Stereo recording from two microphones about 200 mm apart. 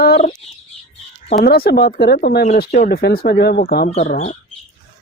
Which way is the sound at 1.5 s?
50° left (ahead or behind).